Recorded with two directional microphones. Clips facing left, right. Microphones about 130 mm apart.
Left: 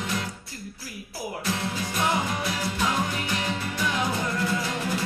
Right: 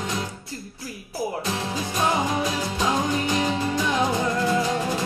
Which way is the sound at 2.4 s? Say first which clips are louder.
Right 3 dB; 20° right (ahead or behind).